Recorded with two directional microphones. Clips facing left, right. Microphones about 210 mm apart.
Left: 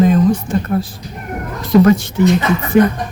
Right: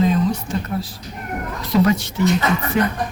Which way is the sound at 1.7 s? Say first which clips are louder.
Left 7 dB; 50° left (ahead or behind).